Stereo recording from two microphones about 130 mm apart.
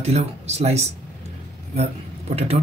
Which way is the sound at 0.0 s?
55° right (ahead or behind).